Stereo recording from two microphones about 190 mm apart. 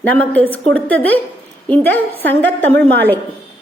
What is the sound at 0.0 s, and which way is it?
A woman's voice, 10° left (ahead or behind).